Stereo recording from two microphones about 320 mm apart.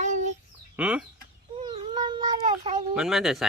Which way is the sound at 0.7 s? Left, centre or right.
Centre.